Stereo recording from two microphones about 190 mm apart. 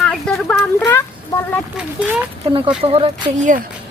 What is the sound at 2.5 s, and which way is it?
Speech, 25° right (ahead or behind).